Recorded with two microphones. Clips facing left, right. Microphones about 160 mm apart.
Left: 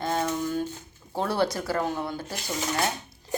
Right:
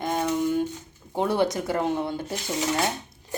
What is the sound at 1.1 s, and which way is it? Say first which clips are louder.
Speech: right 3 dB; 20° right (ahead or behind).